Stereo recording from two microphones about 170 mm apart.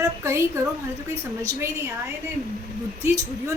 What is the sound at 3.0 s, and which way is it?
Speech, 20° right (ahead or behind).